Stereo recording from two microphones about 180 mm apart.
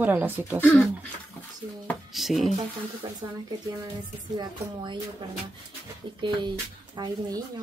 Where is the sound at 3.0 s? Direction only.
20° right (ahead or behind).